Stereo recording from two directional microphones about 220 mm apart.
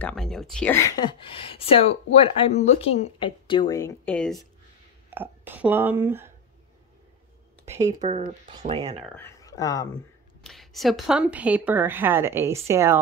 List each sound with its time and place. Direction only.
0.0 s speech: 5° left (ahead or behind)
5.1 s speech: 10° right (ahead or behind)
7.6 s speech: 30° right (ahead or behind)
9.1 s speech: 15° left (ahead or behind)
10.4 s a woman's voice: centre (ahead or behind)